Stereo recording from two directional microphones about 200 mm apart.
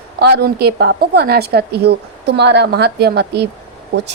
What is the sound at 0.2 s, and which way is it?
A woman's voice, 55° right (ahead or behind).